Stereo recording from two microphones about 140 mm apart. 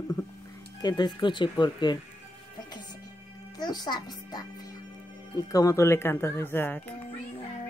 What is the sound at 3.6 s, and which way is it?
Speech, 30° left (ahead or behind).